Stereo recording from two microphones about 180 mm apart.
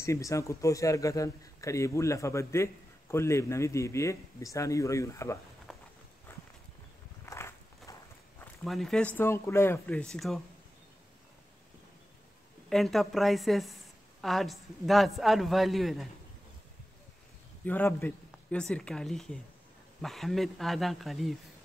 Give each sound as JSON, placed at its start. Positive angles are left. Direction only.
{"t": 0.0, "sound": "a man's voice", "side_deg": 15}
{"t": 5.7, "sound": "walk", "side_deg": 0}
{"t": 6.3, "sound": "walk", "side_deg": 10}
{"t": 8.6, "sound": "a man's voice", "side_deg": 0}
{"t": 12.6, "sound": "a woman's voice", "side_deg": 0}
{"t": 17.6, "sound": "a woman's voice", "side_deg": 10}